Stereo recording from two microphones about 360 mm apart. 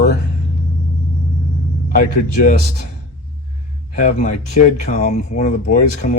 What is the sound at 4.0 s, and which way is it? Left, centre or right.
Speech, centre.